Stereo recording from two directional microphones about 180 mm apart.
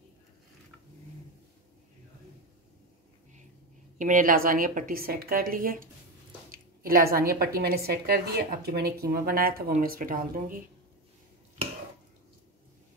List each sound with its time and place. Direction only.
4.0 s a woman's voice: 45° right (ahead or behind)
6.5 s a sound: 55° right (ahead or behind)
7.2 s a woman's voice: 55° right (ahead or behind)